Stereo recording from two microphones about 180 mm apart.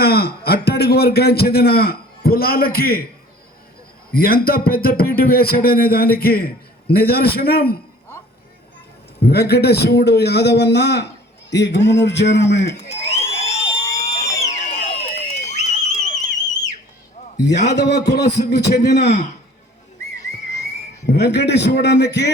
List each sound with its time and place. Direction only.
0.0 s a man's voice: 60° left (ahead or behind)
4.1 s a man's voice: 55° left (ahead or behind)
9.2 s a man's voice: 65° left (ahead or behind)
12.9 s a sound: 35° left (ahead or behind)
15.1 s theremin: 40° left (ahead or behind)
17.3 s a man's voice: 70° left (ahead or behind)
21.1 s a man's voice: 70° left (ahead or behind)